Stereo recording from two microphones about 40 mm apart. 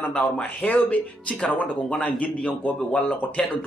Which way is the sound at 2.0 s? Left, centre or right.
Left.